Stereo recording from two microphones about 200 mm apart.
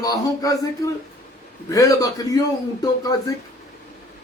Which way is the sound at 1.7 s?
15° left (ahead or behind).